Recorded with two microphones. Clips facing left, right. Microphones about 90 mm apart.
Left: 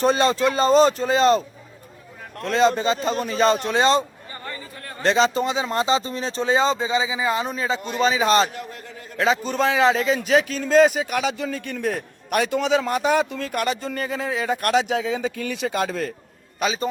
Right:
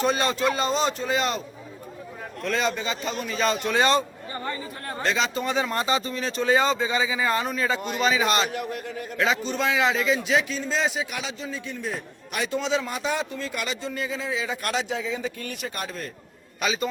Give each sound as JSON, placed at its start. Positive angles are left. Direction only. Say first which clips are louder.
{"t": 0.0, "sound": "speech", "louder": "left 5 dB", "side_deg": 30}
{"t": 2.4, "sound": "speech", "louder": "left 7 dB", "side_deg": 30}
{"t": 5.0, "sound": "speech", "louder": "left 7 dB", "side_deg": 30}
{"t": 5.5, "sound": "speech", "louder": "left 3 dB", "side_deg": 20}
{"t": 8.5, "sound": "a man's voice", "louder": "right 4 dB", "side_deg": -20}
{"t": 9.0, "sound": "speech", "louder": "left 4 dB", "side_deg": 35}
{"t": 10.2, "sound": "a man's voice", "louder": "left 5 dB", "side_deg": 50}
{"t": 16.6, "sound": "speech", "louder": "left 3 dB", "side_deg": 35}